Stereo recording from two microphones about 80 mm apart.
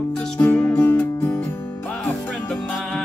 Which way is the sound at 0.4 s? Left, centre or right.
Left.